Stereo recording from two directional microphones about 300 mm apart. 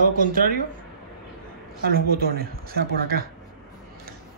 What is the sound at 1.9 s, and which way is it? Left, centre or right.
Speech, right.